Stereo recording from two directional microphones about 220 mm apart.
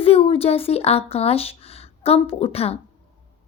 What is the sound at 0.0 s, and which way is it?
Speech, 25° left (ahead or behind).